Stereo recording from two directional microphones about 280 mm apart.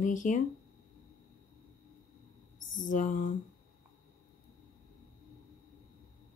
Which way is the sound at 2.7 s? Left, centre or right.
Left.